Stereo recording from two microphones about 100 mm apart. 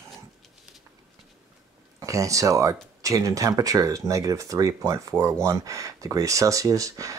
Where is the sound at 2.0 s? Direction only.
35° right (ahead or behind).